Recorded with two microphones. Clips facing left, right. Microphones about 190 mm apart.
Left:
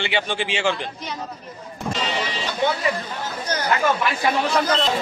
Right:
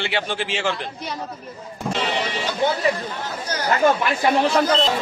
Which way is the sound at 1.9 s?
60° right (ahead or behind).